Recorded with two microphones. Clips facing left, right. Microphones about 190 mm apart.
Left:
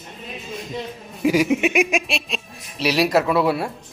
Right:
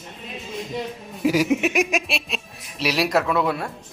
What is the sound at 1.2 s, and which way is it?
Speech, centre (ahead or behind).